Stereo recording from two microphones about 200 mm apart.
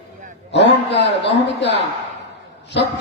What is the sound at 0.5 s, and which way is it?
Mantra, 60° left (ahead or behind).